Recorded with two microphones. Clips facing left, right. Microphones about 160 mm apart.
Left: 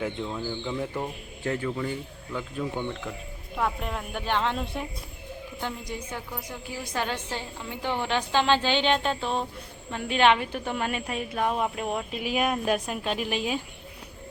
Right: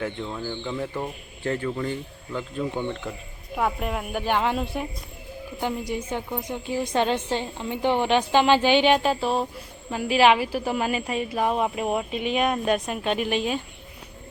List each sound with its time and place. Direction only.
0.0 s a woman's voice: 5° left (ahead or behind)
5.9 s a woman's voice: 25° right (ahead or behind); by 13.6 s centre (ahead or behind)